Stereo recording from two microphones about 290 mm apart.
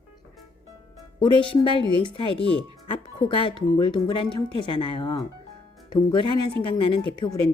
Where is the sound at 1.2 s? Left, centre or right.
Centre.